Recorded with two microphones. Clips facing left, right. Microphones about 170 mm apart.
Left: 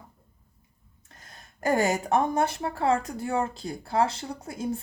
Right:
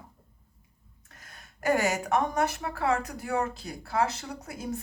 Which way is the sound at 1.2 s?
30° left (ahead or behind).